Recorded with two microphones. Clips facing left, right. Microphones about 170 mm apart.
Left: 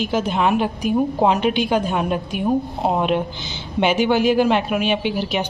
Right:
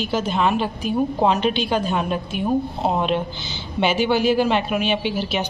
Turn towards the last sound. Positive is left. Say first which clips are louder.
# left 1 dB
turn(degrees=15)  # may be behind; listen again after turning